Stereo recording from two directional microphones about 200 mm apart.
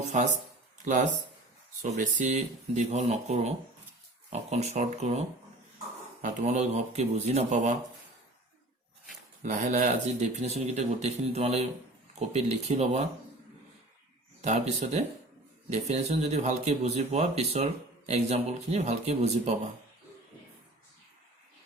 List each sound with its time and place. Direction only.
0.1 s speech: 35° right (ahead or behind)
6.2 s speech: 35° right (ahead or behind)
9.4 s speech: 40° right (ahead or behind)
14.4 s speech: 35° right (ahead or behind)